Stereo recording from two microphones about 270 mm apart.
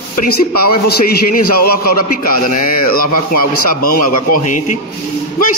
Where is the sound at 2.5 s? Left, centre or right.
Left.